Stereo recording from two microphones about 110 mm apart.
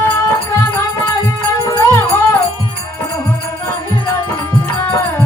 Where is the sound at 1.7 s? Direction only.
25° left (ahead or behind).